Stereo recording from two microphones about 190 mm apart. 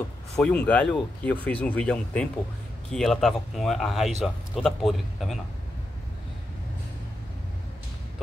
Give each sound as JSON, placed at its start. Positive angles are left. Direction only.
{"t": 0.4, "sound": "speech", "side_deg": 5}